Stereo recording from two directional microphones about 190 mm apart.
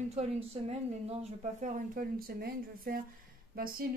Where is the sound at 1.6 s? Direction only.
50° right (ahead or behind).